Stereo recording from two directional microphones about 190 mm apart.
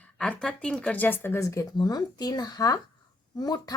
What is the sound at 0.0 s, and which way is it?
A woman's voice, 5° left (ahead or behind).